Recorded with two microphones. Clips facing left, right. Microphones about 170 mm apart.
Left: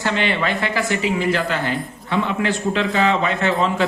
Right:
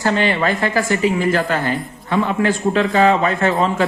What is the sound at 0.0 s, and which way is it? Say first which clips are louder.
Speech: right 4 dB; 40° right (ahead or behind).